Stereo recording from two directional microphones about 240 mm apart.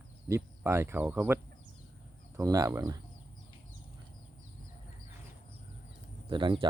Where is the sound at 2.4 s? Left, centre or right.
Centre.